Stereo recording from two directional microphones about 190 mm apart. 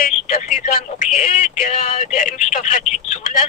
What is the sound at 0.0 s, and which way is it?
Speech, 45° left (ahead or behind).